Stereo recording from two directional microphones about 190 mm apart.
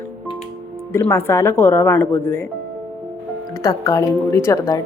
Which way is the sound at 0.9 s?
15° left (ahead or behind).